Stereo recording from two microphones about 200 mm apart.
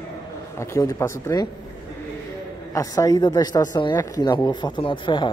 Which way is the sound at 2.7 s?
15° left (ahead or behind).